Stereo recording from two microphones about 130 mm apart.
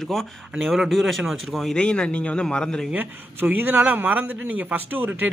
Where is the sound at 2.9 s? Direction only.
15° right (ahead or behind).